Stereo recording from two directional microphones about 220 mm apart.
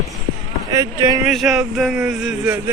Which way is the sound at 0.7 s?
15° right (ahead or behind).